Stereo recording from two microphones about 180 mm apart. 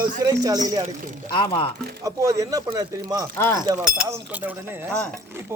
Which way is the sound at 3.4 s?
15° left (ahead or behind).